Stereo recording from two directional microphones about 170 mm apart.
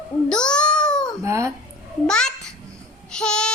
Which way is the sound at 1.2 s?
15° right (ahead or behind).